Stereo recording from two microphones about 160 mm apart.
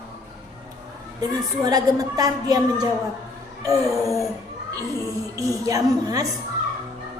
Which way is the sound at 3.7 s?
Centre (ahead or behind).